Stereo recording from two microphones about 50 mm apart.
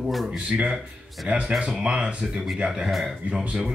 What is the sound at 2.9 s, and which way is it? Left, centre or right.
Speech, centre.